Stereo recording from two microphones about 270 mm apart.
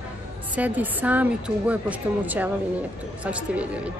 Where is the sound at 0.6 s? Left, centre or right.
Centre.